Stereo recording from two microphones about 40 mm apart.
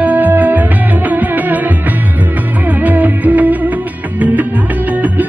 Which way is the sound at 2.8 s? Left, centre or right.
Right.